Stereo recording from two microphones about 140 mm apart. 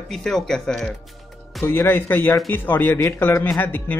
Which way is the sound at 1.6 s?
15° left (ahead or behind).